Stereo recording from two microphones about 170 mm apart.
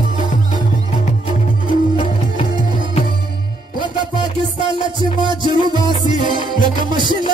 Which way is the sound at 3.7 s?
30° right (ahead or behind).